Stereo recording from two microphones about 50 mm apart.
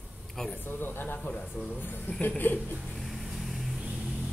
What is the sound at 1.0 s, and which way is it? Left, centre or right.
Speech, left.